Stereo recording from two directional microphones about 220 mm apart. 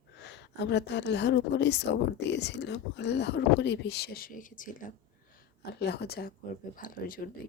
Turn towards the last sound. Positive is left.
turn(degrees=40)  # may be behind; listen again after turning